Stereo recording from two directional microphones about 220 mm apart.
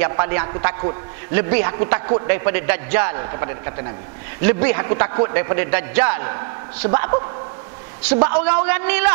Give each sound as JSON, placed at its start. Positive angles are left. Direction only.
{"t": 0.0, "sound": "a man's voice", "side_deg": -15}